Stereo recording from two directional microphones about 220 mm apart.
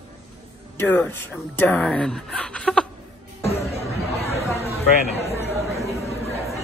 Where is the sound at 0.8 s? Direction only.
10° left (ahead or behind).